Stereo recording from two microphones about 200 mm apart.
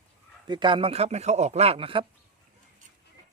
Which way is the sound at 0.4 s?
25° right (ahead or behind).